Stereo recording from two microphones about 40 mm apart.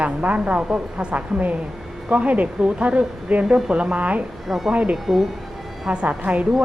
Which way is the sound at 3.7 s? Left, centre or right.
Right.